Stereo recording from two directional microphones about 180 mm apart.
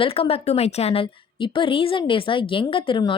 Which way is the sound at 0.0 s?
30° left (ahead or behind).